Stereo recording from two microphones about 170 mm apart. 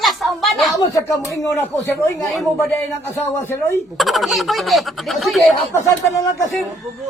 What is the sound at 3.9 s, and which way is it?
A child's voice, centre (ahead or behind).